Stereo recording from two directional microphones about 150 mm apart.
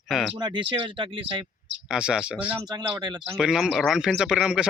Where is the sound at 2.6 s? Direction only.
25° right (ahead or behind).